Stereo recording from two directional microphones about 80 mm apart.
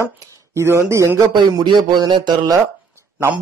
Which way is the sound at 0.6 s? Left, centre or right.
Right.